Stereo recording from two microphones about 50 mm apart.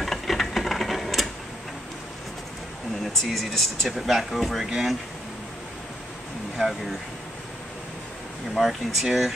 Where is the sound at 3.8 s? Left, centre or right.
Centre.